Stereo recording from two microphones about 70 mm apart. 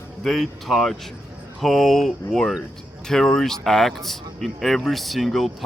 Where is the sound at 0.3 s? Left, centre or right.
Centre.